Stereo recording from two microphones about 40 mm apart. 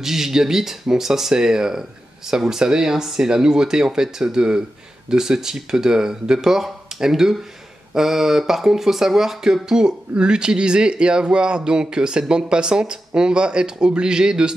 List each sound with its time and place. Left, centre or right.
0.0 s speech: centre